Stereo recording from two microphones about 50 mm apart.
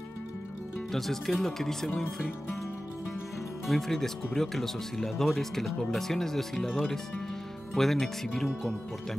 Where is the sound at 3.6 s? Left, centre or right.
Centre.